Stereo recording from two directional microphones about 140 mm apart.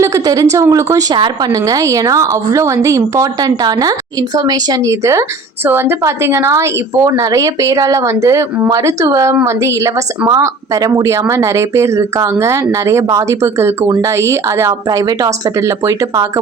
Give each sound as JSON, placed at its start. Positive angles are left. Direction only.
{"t": 0.0, "sound": "a woman's voice", "side_deg": -25}
{"t": 1.1, "sound": "speech", "side_deg": -35}
{"t": 1.6, "sound": "a woman's voice", "side_deg": -25}